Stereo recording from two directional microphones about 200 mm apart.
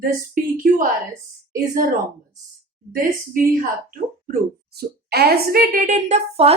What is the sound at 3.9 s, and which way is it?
A woman's voice, 45° right (ahead or behind).